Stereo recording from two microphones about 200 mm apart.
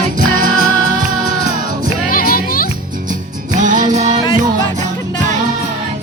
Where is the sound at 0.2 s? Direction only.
40° right (ahead or behind).